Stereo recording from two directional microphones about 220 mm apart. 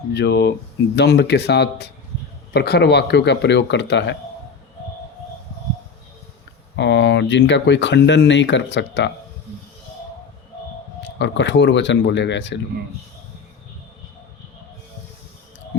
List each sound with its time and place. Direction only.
0.1 s speech: 50° left (ahead or behind)
6.7 s speech: 55° left (ahead or behind)
11.0 s speech: 55° left (ahead or behind)